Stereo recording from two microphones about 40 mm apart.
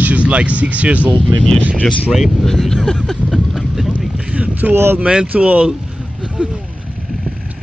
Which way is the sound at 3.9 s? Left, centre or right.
Right.